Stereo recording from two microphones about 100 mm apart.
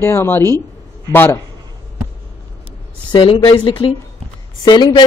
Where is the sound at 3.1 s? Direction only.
50° left (ahead or behind).